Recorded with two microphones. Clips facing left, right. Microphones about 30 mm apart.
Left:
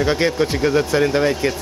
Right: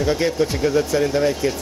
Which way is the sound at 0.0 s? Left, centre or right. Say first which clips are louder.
Left 2 dB; left.